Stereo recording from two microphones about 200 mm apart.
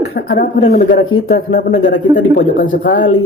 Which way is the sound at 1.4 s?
55° left (ahead or behind).